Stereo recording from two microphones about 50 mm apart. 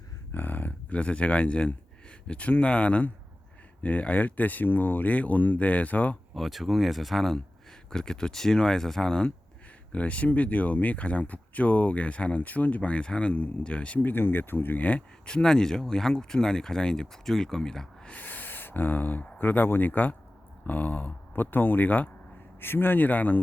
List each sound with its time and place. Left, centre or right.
0.3 s speech: left
6.3 s speech: centre
9.9 s speech: left
14.1 s speech: left
15.3 s speech: centre
18.1 s speech: left